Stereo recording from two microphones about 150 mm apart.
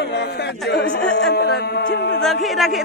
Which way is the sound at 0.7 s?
90° left.